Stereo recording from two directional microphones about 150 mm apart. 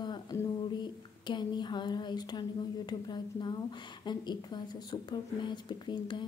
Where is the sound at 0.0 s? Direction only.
30° left (ahead or behind).